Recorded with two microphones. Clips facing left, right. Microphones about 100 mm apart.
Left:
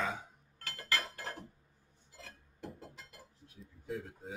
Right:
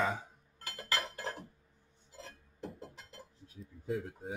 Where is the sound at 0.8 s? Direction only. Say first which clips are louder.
Right 1 dB; 20° right (ahead or behind).